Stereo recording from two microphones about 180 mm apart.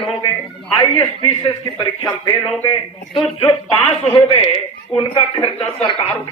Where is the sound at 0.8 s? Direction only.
25° left (ahead or behind).